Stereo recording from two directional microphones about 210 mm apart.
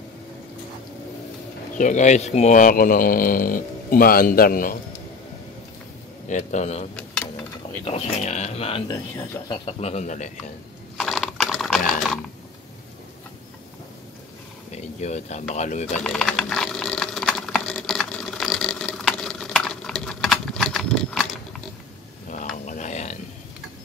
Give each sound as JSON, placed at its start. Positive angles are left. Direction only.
{"t": 1.8, "sound": "speech", "side_deg": 35}
{"t": 6.2, "sound": "speech", "side_deg": 35}
{"t": 9.7, "sound": "speech", "side_deg": 30}
{"t": 11.0, "sound": "ratchet", "side_deg": 0}
{"t": 14.7, "sound": "speech", "side_deg": 30}
{"t": 16.0, "sound": "typing", "side_deg": 0}
{"t": 22.7, "sound": "a sound", "side_deg": 35}